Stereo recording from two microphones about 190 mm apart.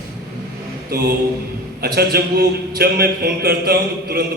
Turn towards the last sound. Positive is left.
turn(degrees=-55)  # may be behind; listen again after turning